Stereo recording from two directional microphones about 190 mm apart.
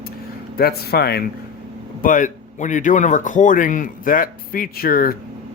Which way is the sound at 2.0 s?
45° left (ahead or behind).